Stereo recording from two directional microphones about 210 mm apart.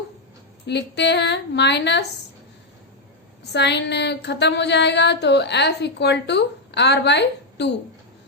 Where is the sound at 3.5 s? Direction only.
55° left (ahead or behind).